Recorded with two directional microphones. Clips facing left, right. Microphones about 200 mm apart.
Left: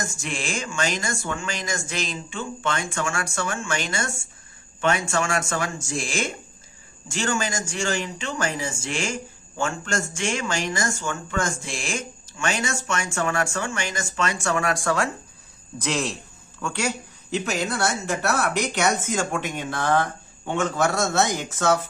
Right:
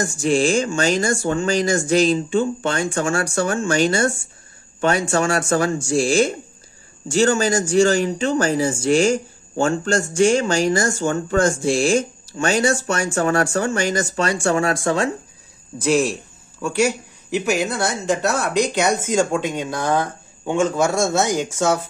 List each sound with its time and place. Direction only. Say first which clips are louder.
0.0 s speech: right 13 dB; 35° right (ahead or behind)
16.6 s a man's voice: right 8 dB; 10° right (ahead or behind)